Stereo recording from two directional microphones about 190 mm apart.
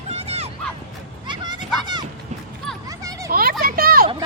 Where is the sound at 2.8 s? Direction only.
15° right (ahead or behind).